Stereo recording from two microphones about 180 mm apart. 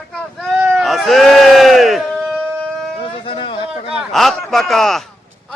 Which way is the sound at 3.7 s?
Centre (ahead or behind).